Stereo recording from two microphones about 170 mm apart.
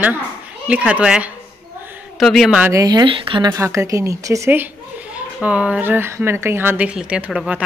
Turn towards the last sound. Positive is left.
turn(degrees=-10)  # may be behind; listen again after turning